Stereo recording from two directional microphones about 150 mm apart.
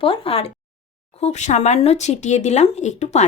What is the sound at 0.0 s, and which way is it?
Speech, 40° left (ahead or behind).